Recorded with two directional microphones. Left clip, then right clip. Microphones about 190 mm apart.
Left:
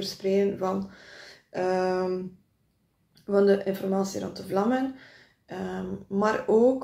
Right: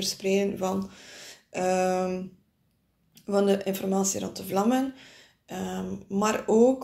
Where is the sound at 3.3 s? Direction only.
25° right (ahead or behind).